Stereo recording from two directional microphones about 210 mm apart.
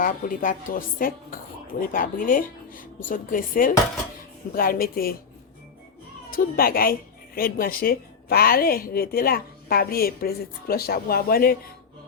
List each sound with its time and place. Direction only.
0.0 s a woman's voice: 40° left (ahead or behind)
6.3 s a woman's voice: 45° left (ahead or behind)